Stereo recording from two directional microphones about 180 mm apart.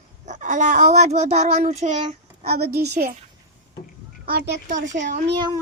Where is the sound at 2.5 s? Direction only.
60° right (ahead or behind).